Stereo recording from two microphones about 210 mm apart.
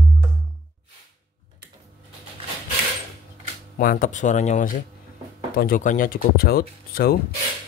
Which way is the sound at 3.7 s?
40° left (ahead or behind).